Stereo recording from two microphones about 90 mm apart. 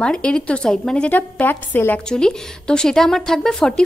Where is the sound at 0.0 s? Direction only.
10° left (ahead or behind).